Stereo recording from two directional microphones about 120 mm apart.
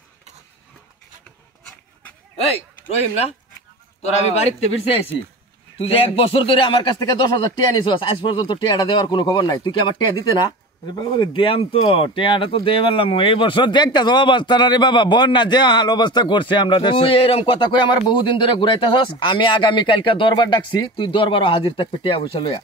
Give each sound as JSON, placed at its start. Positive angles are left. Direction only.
{"t": 4.0, "sound": "speech", "side_deg": 65}
{"t": 5.8, "sound": "speech", "side_deg": 50}
{"t": 7.0, "sound": "speech", "side_deg": 35}